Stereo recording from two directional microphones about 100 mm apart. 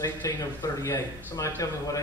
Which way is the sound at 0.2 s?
35° left (ahead or behind).